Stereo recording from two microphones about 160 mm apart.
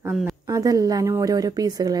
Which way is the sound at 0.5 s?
20° right (ahead or behind).